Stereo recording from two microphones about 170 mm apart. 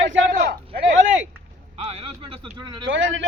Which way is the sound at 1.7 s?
40° right (ahead or behind).